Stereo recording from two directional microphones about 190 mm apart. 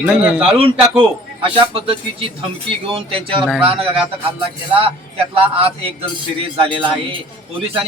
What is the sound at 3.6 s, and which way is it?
Speech, 30° right (ahead or behind).